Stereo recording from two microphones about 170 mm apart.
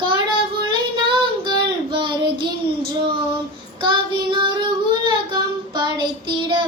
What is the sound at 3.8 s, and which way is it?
Child singing, 30° right (ahead or behind).